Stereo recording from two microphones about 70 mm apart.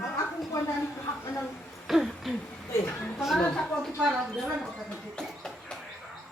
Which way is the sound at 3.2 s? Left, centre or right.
Centre.